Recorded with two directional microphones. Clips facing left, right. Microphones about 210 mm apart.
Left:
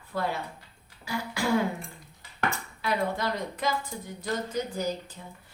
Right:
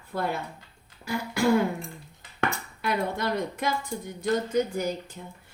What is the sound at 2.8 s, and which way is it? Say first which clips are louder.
Speech: right 1 dB; 55° right (ahead or behind).